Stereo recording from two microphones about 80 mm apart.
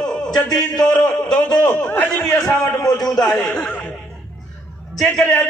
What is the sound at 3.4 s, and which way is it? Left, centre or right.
Speech, left.